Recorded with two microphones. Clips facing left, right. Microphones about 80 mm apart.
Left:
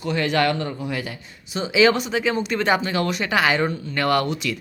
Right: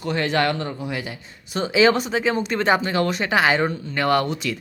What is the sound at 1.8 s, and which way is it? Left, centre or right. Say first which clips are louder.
Speech: even; right.